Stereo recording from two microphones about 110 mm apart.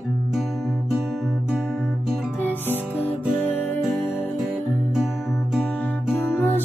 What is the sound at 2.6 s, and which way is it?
Music, 20° right (ahead or behind).